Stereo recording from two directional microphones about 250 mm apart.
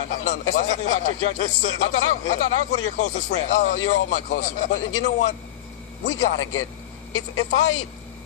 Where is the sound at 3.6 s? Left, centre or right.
Left.